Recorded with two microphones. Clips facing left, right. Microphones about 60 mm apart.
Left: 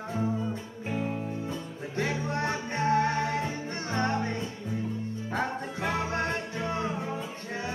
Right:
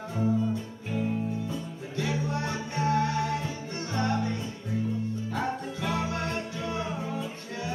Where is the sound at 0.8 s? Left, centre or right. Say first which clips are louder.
Right 1 dB; left.